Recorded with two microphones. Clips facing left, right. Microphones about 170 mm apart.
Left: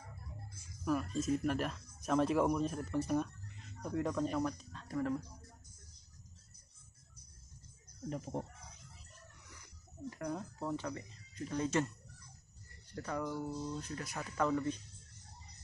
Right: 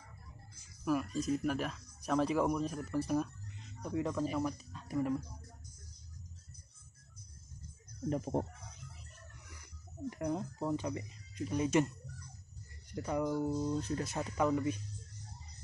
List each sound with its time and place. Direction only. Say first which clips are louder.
0.8 s speech: right 1 dB; 5° right (ahead or behind)
8.1 s speech: right 6 dB; 50° right (ahead or behind)
10.0 s speech: right 4 dB; 20° right (ahead or behind)
12.9 s speech: right 5 dB; 15° right (ahead or behind)
13.7 s speech: right 7 dB; 30° right (ahead or behind); by 14.8 s 15° right (ahead or behind)